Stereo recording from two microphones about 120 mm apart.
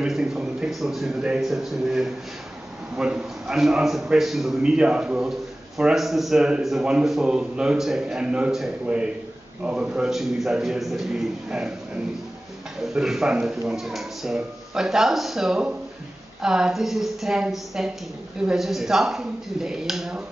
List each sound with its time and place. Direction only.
0.0 s a man's voice: 5° right (ahead or behind)
12.9 s a man's voice: 5° right (ahead or behind)